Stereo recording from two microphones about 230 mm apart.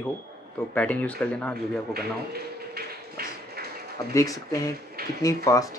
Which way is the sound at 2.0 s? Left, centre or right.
Right.